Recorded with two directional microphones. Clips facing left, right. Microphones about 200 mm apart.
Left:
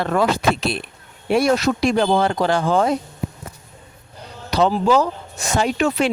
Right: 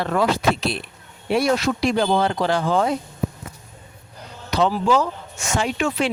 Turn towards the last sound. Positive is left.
turn(degrees=40)  # may be behind; listen again after turning